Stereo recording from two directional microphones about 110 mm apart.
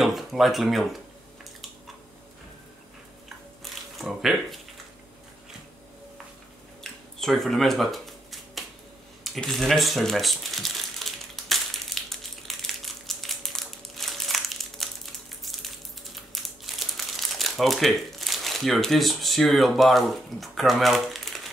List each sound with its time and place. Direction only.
0.0 s speech: centre (ahead or behind)
4.0 s speech: centre (ahead or behind)
6.8 s a sound: 5° left (ahead or behind)
9.2 s crumpling: 5° left (ahead or behind)
16.4 s speech: centre (ahead or behind)